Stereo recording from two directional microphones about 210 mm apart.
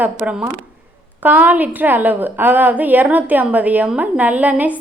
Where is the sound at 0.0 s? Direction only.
5° right (ahead or behind).